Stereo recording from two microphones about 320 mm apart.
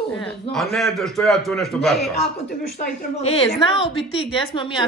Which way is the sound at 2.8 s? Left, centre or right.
Centre.